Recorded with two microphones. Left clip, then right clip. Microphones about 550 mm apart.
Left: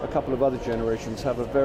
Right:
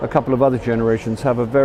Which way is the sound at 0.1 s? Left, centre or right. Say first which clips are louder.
Right 8 dB; right.